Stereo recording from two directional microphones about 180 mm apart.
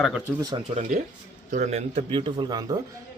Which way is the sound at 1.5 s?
40° right (ahead or behind).